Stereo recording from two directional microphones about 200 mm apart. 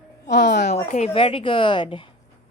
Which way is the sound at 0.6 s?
35° left (ahead or behind).